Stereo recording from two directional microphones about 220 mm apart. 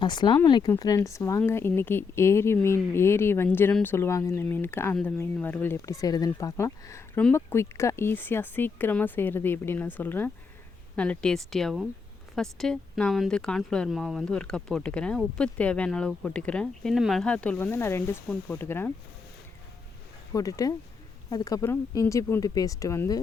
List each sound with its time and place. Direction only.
0.0 s speech: 20° left (ahead or behind)
20.3 s speech: 15° left (ahead or behind)